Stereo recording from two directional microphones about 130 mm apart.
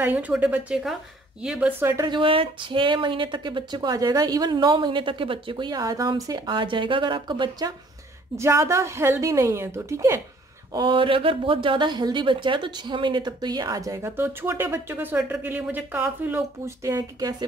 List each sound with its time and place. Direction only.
0.0 s speech: 10° right (ahead or behind)
1.8 s a woman's voice: 20° right (ahead or behind)
2.0 s speech: 40° right (ahead or behind)
8.4 s a woman's voice: 20° right (ahead or behind)
10.7 s speech: 35° right (ahead or behind)